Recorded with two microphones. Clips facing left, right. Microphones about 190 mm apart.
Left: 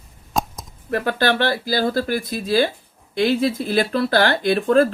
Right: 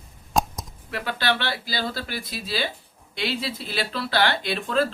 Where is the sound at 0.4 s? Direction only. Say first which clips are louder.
Even; centre (ahead or behind).